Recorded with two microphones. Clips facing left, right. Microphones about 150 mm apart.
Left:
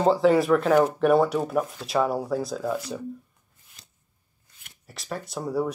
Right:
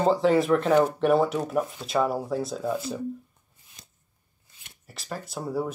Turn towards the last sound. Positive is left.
turn(degrees=0)  # may be behind; listen again after turning